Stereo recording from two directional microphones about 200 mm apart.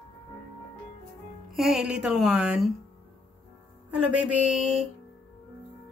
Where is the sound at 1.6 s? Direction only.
Centre (ahead or behind).